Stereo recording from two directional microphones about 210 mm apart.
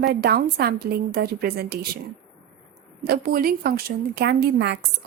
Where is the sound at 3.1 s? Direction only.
45° right (ahead or behind).